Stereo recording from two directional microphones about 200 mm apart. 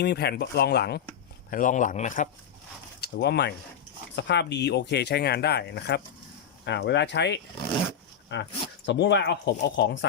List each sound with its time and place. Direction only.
0.0 s speech: 55° left (ahead or behind)
1.5 s a man's voice: 40° left (ahead or behind)
3.0 s speech: 55° left (ahead or behind)